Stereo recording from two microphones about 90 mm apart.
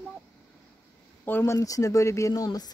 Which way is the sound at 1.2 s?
20° left (ahead or behind).